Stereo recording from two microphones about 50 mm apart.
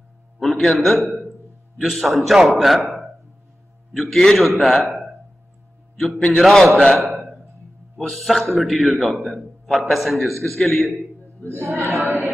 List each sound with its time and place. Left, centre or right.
0.4 s a man's voice: centre
3.9 s a man's voice: centre
6.1 s a man's voice: centre
6.4 s a man's voice: centre
7.0 s a sound: centre
8.0 s a man's voice: centre
11.4 s speech: right
11.9 s a sound: centre